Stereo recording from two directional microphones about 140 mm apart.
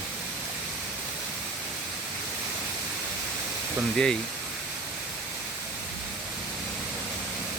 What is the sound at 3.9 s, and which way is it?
Speech, 5° left (ahead or behind).